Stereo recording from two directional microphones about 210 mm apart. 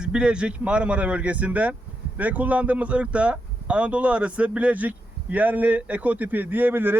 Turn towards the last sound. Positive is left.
turn(degrees=-10)  # may be behind; listen again after turning